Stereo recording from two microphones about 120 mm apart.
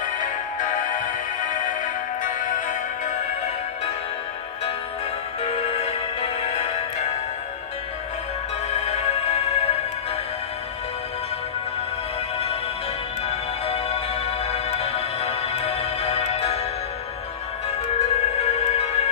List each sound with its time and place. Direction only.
0.0 s music: 90° left
5.4 s music: 65° left (ahead or behind)
8.6 s music: 65° left (ahead or behind)
13.3 s music: 60° left (ahead or behind)
17.9 s music: 65° left (ahead or behind)